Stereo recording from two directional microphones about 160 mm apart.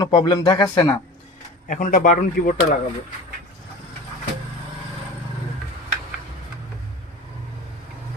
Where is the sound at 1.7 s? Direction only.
50° left (ahead or behind).